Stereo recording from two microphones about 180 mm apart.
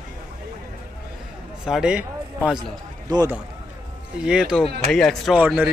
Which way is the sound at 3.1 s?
20° right (ahead or behind).